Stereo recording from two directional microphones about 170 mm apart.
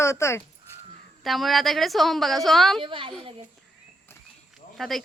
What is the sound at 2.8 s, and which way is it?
Speech, 30° right (ahead or behind).